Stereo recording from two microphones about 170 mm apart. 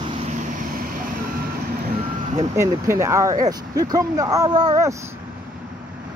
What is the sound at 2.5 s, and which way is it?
Speech, 15° right (ahead or behind).